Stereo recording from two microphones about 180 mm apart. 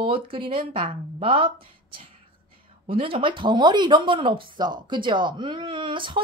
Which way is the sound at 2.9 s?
30° right (ahead or behind).